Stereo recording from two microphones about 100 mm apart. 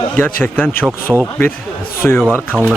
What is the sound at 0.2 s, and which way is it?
Speech, 15° left (ahead or behind).